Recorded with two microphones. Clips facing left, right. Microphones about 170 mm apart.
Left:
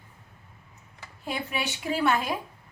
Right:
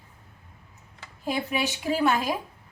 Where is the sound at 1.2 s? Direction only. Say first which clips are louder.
Right 4 dB; 35° right (ahead or behind).